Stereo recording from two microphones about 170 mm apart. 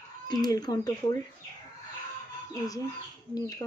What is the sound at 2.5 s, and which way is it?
Speech, 20° left (ahead or behind).